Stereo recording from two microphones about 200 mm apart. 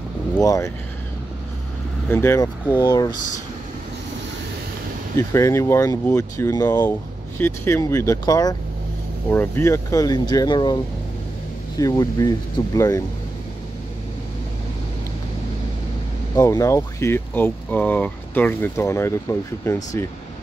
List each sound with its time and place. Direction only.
0.4 s speech: 15° left (ahead or behind)
2.0 s speech: 10° left (ahead or behind)
5.1 s speech: 15° left (ahead or behind)
16.3 s speech: 15° left (ahead or behind)